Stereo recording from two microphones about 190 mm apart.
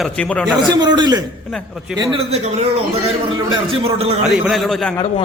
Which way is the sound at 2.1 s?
35° right (ahead or behind).